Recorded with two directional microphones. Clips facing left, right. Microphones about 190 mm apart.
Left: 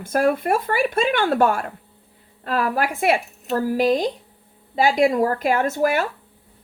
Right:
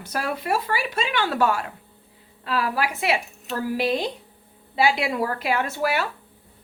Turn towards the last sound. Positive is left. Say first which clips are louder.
# left 4 dB
turn(degrees=45)  # may be behind; listen again after turning